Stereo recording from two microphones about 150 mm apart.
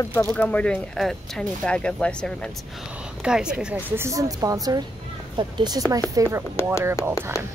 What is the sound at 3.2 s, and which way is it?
A woman's voice, 5° right (ahead or behind).